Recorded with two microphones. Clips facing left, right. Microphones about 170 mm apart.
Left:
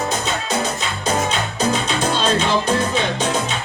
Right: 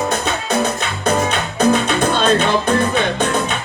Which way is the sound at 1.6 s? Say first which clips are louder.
Right 7 dB; 55° right (ahead or behind).